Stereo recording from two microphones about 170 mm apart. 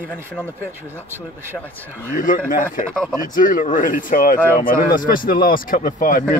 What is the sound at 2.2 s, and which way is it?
Speech, 50° left (ahead or behind).